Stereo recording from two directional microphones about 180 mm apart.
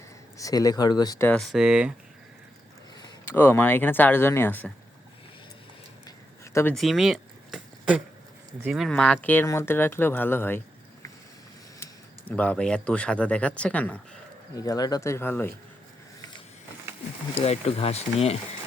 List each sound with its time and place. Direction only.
0.3 s speech: 20° left (ahead or behind)
1.3 s speech: centre (ahead or behind)
3.2 s speech: 10° left (ahead or behind)
6.1 s a sound: 15° left (ahead or behind)
6.7 s a sound: centre (ahead or behind)
8.6 s speech: centre (ahead or behind)
11.8 s speech: 10° left (ahead or behind)
14.5 s speech: 20° left (ahead or behind)
17.3 s speech: 35° left (ahead or behind)